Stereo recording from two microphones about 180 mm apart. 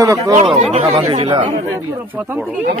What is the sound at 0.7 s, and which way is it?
Speech, 35° right (ahead or behind).